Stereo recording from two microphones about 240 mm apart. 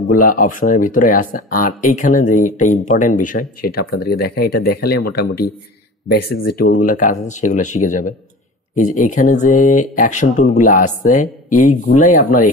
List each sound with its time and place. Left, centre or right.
0.0 s speech: left